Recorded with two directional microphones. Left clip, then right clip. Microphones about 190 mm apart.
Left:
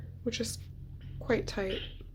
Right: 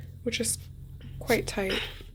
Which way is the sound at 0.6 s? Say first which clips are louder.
Right 3 dB; 75° right (ahead or behind).